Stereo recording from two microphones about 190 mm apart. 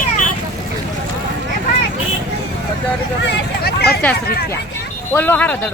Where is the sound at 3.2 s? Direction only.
60° left (ahead or behind).